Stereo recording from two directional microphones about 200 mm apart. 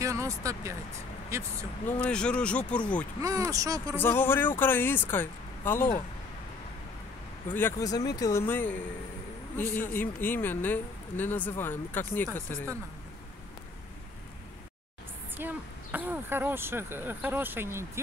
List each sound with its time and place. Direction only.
0.0 s speech: 15° right (ahead or behind)
1.9 s speech: 5° left (ahead or behind)
3.2 s speech: 15° right (ahead or behind)
3.9 s speech: 10° left (ahead or behind)
7.4 s speech: 10° left (ahead or behind)
15.3 s speech: 10° right (ahead or behind)